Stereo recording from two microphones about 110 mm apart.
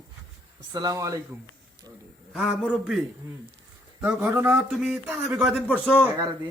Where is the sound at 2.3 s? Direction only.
Centre (ahead or behind).